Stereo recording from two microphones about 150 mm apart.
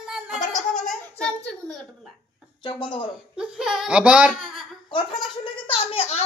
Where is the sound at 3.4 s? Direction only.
5° right (ahead or behind).